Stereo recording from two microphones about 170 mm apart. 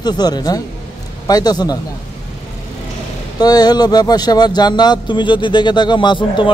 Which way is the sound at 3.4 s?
25° left (ahead or behind).